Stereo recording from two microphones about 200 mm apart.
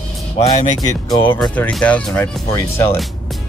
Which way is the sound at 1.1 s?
10° left (ahead or behind).